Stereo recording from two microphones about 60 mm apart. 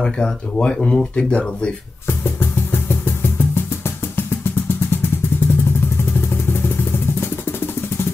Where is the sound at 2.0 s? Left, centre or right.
Left.